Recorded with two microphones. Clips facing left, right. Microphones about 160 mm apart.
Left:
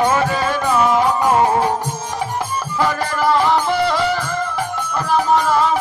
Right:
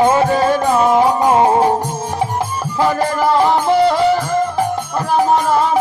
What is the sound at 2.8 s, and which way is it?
Music, 25° right (ahead or behind).